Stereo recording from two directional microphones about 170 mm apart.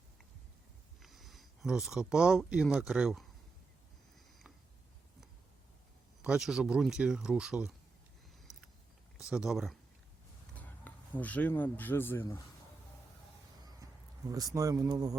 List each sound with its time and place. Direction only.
1.0 s speech: centre (ahead or behind)
6.2 s speech: 5° right (ahead or behind)
9.1 s speech: 5° right (ahead or behind)
10.6 s speech: 10° left (ahead or behind)
14.5 s speech: 20° right (ahead or behind)